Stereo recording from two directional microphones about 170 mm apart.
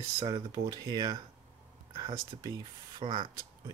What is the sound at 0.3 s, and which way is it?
Speech, 25° right (ahead or behind).